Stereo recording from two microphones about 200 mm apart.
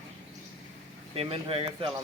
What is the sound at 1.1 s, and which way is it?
Speech, 30° right (ahead or behind).